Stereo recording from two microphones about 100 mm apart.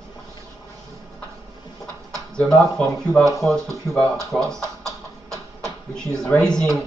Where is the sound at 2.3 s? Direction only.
5° left (ahead or behind).